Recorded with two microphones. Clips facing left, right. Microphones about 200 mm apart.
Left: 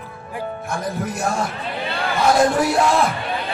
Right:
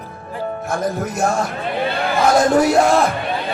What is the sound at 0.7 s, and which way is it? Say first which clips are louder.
Speech: right 4 dB; 45° right (ahead or behind).